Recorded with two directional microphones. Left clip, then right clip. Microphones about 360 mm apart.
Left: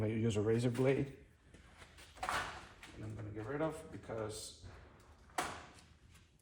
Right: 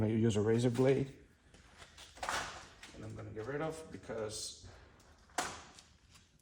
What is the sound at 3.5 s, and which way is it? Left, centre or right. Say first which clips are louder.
Speech: left 2 dB; right.